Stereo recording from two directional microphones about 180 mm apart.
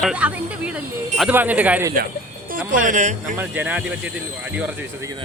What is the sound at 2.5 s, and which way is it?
Speech, 50° right (ahead or behind).